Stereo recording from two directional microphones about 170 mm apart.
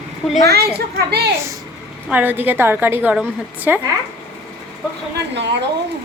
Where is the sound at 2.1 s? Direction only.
10° right (ahead or behind).